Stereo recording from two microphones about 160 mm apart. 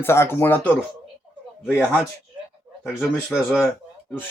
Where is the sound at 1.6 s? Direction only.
10° right (ahead or behind).